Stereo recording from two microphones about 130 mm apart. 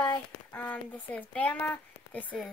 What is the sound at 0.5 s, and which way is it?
Speech, 10° left (ahead or behind).